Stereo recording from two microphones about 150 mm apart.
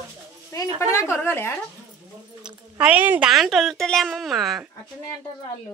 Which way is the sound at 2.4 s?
10° right (ahead or behind).